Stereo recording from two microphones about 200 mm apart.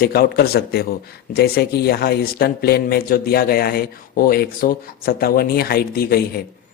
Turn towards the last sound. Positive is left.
turn(degrees=50)  # may be behind; listen again after turning